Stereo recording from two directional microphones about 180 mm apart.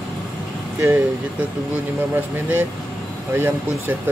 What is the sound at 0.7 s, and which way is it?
Speech, 10° right (ahead or behind).